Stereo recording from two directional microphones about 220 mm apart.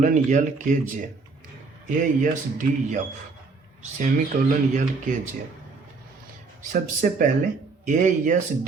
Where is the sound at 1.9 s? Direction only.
35° right (ahead or behind).